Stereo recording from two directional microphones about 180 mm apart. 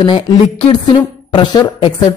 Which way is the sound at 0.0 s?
25° left (ahead or behind).